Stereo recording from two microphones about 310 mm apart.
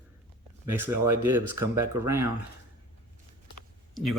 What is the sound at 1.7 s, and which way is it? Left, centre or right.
Speech, centre.